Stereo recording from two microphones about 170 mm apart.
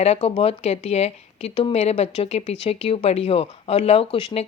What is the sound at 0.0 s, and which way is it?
Speech, 35° left (ahead or behind).